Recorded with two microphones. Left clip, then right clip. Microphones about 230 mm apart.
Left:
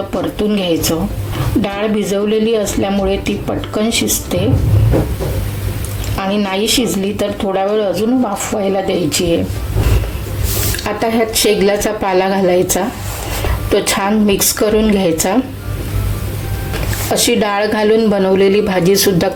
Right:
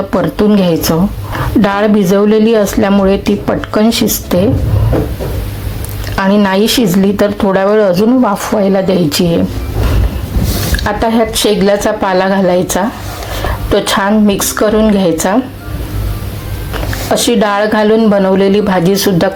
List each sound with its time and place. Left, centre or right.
0.1 s a woman's voice: centre
6.1 s a woman's voice: centre
11.0 s speech: centre
17.1 s speech: centre